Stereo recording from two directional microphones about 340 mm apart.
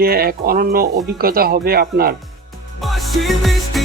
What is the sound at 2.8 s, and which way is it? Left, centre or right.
Music, centre.